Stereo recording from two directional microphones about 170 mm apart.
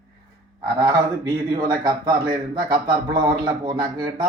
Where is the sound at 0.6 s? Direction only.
25° right (ahead or behind).